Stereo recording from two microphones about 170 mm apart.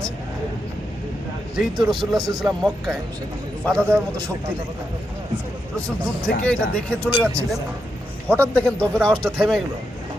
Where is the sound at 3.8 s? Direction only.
15° right (ahead or behind).